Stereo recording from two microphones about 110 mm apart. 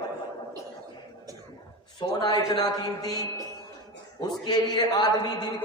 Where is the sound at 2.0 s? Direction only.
40° left (ahead or behind).